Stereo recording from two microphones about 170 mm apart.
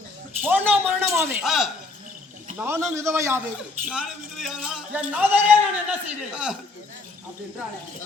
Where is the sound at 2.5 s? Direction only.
15° right (ahead or behind).